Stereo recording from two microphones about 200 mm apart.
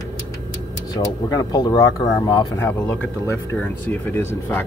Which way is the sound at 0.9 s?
20° left (ahead or behind).